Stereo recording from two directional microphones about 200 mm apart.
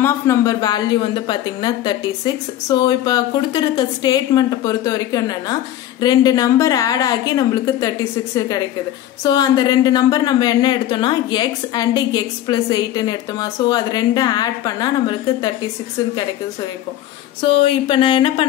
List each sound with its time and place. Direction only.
0.0 s a woman's voice: 15° left (ahead or behind)
17.4 s a woman's voice: 25° left (ahead or behind)